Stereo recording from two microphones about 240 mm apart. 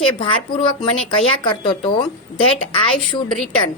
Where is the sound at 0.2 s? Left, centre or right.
Left.